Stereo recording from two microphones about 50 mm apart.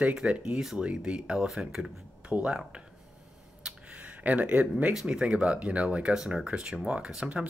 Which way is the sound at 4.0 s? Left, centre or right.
Right.